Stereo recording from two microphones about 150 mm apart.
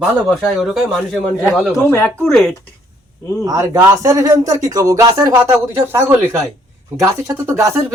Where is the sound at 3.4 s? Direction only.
25° right (ahead or behind).